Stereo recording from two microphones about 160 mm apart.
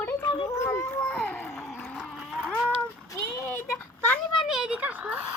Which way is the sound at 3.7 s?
5° left (ahead or behind).